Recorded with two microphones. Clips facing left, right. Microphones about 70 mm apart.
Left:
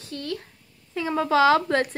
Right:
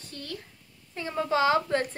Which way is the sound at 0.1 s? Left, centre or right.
Left.